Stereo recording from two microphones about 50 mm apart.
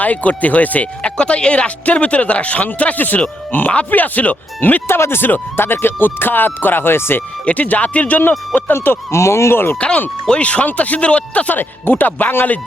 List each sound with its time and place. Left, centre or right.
0.0 s speech: left
1.0 s speech: left
4.9 s speech: left
7.4 s speech: left
8.7 s speech: left
9.1 s speech: left
10.2 s speech: left
11.5 s speech: left